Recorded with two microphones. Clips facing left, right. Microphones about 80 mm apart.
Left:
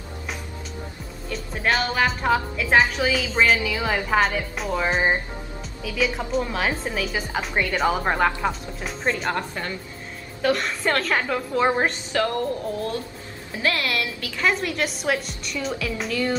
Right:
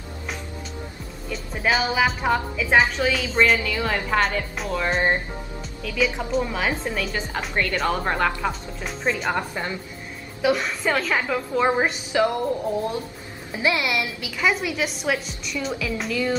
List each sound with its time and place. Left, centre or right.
1.3 s speech: centre
9.3 s speech: centre
10.4 s speech: centre
12.1 s speech: centre